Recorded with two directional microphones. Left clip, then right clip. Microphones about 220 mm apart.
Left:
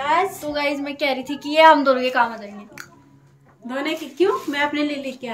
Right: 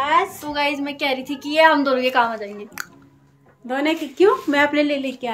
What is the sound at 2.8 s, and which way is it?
A woman's voice, 25° right (ahead or behind).